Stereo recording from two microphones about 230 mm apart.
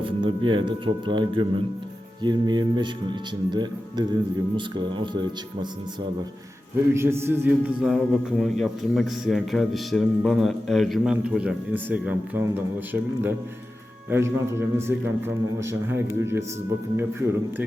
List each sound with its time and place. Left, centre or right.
0.0 s speech: right
6.9 s a man's voice: centre